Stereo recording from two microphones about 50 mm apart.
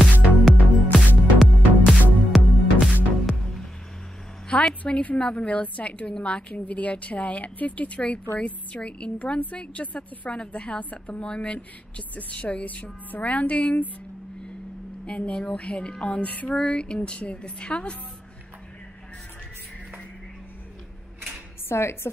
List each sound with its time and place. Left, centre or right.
0.5 s music: centre
4.5 s a sound: left
4.8 s a woman's voice: left
15.0 s a woman's voice: left
21.6 s a woman's voice: left